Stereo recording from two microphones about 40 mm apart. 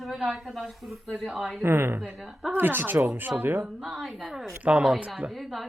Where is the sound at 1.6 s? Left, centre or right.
Right.